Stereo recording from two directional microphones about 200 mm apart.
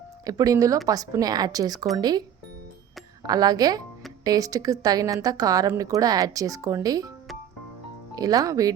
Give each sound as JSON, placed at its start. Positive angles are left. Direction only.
{"t": 0.3, "sound": "speech", "side_deg": -15}
{"t": 3.2, "sound": "speech", "side_deg": -20}
{"t": 8.1, "sound": "speech", "side_deg": -20}